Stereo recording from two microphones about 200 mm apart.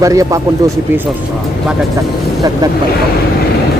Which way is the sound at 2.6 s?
20° right (ahead or behind).